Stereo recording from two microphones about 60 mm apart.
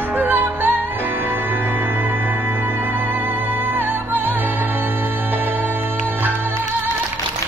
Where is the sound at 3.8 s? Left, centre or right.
Right.